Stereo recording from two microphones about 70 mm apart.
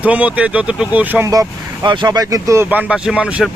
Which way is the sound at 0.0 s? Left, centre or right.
Centre.